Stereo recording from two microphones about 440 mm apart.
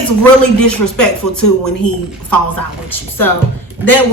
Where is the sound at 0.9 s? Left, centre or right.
Left.